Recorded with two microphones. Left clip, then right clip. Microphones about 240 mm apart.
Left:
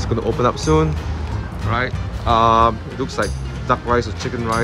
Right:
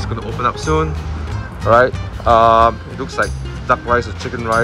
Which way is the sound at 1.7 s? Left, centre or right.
Centre.